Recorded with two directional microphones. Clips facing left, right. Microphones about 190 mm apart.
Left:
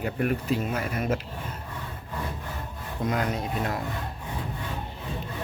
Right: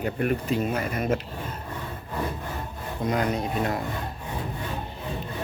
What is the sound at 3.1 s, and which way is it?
Speech, centre (ahead or behind).